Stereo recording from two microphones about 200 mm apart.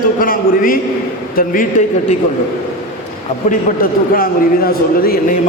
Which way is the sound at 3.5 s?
45° left (ahead or behind).